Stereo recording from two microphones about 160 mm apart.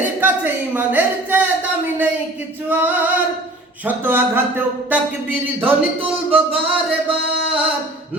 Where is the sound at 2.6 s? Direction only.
10° right (ahead or behind).